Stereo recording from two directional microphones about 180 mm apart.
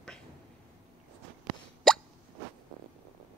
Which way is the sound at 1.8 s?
Centre (ahead or behind).